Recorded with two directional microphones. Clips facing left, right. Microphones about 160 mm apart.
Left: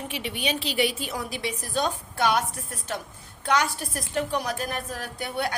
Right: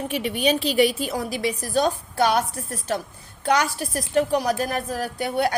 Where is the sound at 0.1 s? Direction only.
45° right (ahead or behind).